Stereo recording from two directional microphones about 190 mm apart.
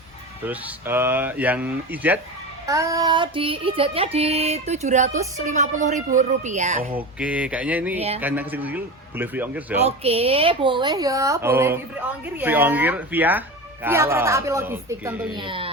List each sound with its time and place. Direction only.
0.4 s speech: 10° right (ahead or behind)
2.6 s child singing: 15° right (ahead or behind); by 7.0 s 35° right (ahead or behind)
7.2 s speech: 5° right (ahead or behind)
9.8 s speech: 30° right (ahead or behind); by 15.3 s 10° right (ahead or behind)
15.3 s speech: 25° right (ahead or behind)